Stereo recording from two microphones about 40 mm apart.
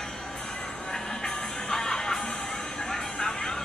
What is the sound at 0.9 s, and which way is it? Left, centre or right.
Music, centre.